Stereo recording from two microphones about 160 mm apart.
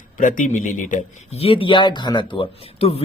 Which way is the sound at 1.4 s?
35° left (ahead or behind).